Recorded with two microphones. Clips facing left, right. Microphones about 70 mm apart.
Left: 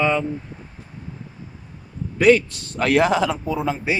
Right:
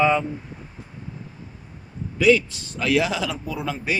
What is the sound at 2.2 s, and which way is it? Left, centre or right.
A man's voice, left.